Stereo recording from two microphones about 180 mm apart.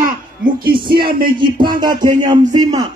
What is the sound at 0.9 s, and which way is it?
Speech, 60° right (ahead or behind).